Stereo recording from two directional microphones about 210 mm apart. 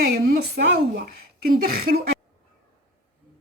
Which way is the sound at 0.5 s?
50° right (ahead or behind).